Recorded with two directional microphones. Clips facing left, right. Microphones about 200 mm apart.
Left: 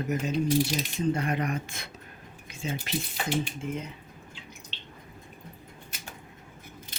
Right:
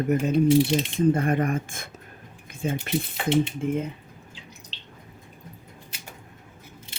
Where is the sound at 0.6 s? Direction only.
25° right (ahead or behind).